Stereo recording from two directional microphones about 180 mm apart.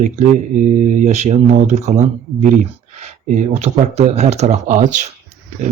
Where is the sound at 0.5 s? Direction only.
45° right (ahead or behind).